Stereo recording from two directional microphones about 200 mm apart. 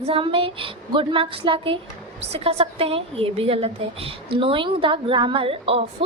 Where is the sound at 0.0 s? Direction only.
25° right (ahead or behind).